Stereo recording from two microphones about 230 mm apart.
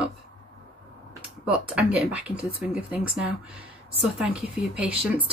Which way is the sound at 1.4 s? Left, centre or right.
Centre.